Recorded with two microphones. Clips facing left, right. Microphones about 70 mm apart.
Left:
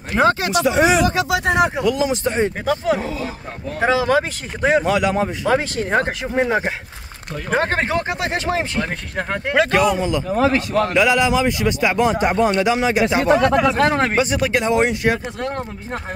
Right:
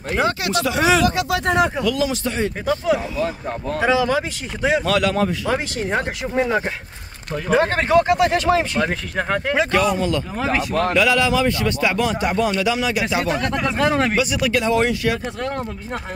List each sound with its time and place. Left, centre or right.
0.2 s speech: left
0.5 s a man's voice: left
1.4 s a man's voice: centre
1.8 s a man's voice: left
4.8 s a man's voice: centre
5.5 s speech: left
6.2 s a man's voice: left
9.7 s a man's voice: centre; by 13.4 s left
13.7 s speech: left; by 15.1 s centre